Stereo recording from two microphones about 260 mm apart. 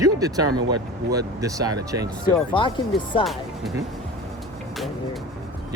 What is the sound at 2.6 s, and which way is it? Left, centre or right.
Speech, centre.